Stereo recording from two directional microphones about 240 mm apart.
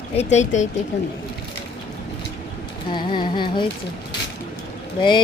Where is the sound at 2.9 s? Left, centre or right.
Centre.